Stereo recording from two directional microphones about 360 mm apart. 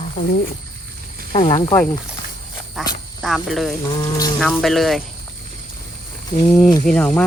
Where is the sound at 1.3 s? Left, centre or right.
Centre.